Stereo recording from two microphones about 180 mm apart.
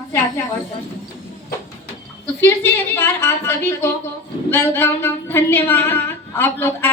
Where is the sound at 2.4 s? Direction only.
15° left (ahead or behind).